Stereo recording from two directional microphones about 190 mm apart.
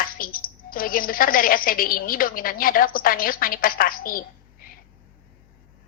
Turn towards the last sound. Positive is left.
turn(degrees=50)  # may be behind; listen again after turning